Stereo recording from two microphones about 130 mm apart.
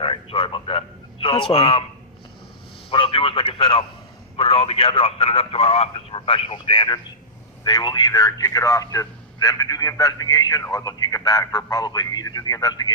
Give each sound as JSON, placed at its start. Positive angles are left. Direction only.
{"t": 0.0, "sound": "a man's voice", "side_deg": 45}
{"t": 2.9, "sound": "a man's voice", "side_deg": 45}